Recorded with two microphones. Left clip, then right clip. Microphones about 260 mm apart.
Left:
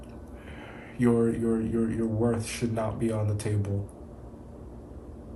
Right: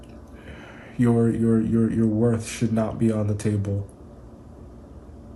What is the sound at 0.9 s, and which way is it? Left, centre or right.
A man's voice, right.